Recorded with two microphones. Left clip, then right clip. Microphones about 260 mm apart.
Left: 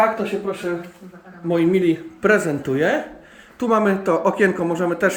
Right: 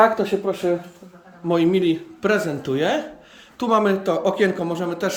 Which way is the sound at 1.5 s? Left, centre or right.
Centre.